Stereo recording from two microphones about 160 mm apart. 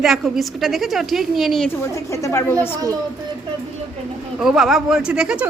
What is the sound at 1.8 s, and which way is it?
Speech, 20° left (ahead or behind).